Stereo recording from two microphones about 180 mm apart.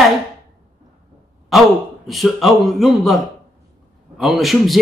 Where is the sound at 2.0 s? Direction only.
Centre (ahead or behind).